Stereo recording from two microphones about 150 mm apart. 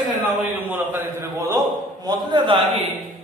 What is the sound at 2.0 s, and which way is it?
Speech, 30° right (ahead or behind).